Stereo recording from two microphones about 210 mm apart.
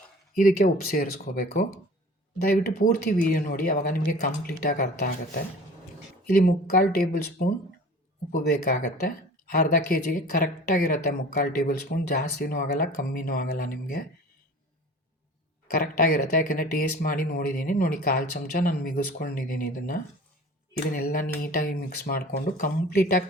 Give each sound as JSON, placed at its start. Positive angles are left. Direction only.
{"t": 0.3, "sound": "speech", "side_deg": 45}
{"t": 15.7, "sound": "speech", "side_deg": 45}